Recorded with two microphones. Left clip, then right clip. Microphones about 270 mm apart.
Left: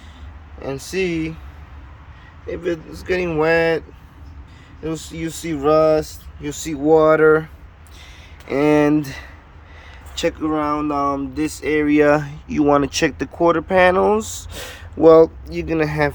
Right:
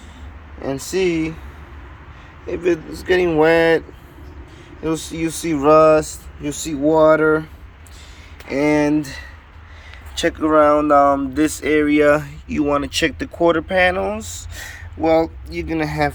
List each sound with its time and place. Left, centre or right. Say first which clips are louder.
0.6 s speech: right 3 dB; centre
2.5 s speech: right 4 dB; centre
8.4 s speech: left 1 dB; centre
10.2 s speech: right 6 dB; centre